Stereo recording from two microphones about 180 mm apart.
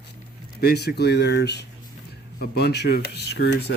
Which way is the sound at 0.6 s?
65° left (ahead or behind).